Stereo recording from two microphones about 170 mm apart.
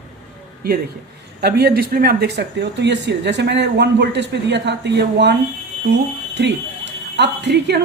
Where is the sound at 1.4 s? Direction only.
70° right (ahead or behind).